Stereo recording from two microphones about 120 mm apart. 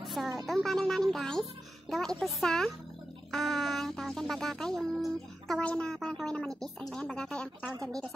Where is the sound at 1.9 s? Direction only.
5° left (ahead or behind).